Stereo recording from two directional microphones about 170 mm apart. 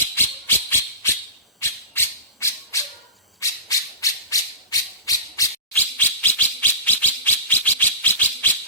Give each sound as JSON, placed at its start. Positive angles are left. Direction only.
{"t": 0.2, "sound": "a sound", "side_deg": 15}
{"t": 3.4, "sound": "music", "side_deg": 20}
{"t": 6.0, "sound": "bird", "side_deg": 10}